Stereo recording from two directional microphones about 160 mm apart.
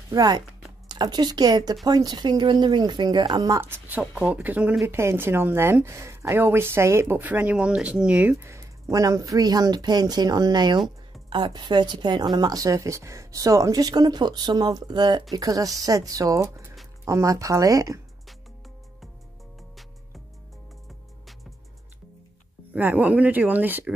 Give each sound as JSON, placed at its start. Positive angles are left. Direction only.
{"t": 0.1, "sound": "a woman's voice", "side_deg": -25}
{"t": 3.6, "sound": "a woman's voice", "side_deg": -15}
{"t": 22.7, "sound": "speech", "side_deg": -10}